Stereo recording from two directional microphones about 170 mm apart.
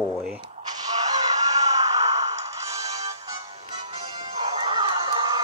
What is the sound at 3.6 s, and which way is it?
Music, 40° right (ahead or behind).